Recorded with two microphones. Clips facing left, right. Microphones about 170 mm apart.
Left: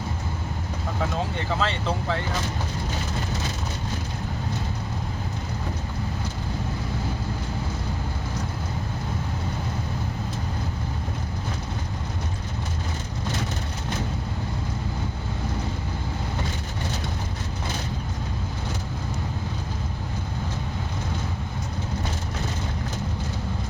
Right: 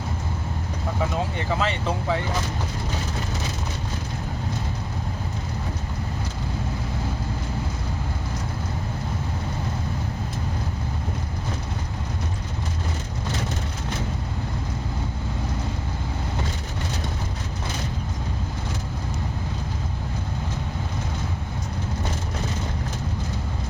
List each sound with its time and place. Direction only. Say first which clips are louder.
1.5 s speech: right 1 dB; 10° right (ahead or behind)